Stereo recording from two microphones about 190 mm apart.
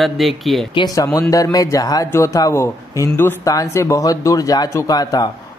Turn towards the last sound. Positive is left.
turn(degrees=20)  # may be behind; listen again after turning